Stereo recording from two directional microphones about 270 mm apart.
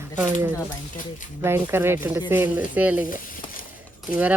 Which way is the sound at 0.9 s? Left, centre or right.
Left.